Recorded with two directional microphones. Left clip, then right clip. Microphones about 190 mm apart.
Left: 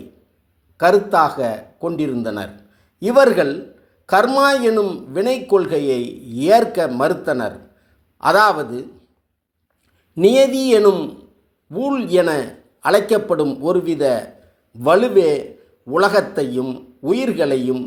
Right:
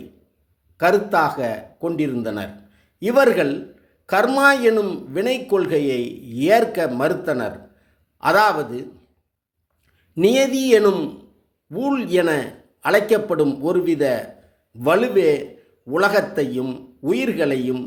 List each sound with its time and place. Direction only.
0.8 s a man's voice: centre (ahead or behind)
10.2 s a man's voice: centre (ahead or behind)